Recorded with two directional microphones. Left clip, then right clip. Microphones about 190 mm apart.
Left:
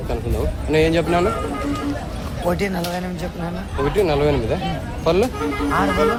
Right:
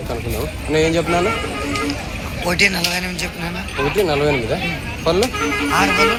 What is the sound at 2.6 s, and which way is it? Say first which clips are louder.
Speech: right 8 dB; 30° left (ahead or behind).